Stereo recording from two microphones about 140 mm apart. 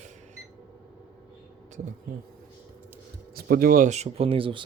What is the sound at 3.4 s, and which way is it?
Speech, 90° right.